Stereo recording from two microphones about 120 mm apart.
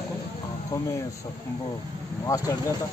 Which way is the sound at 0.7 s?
25° left (ahead or behind).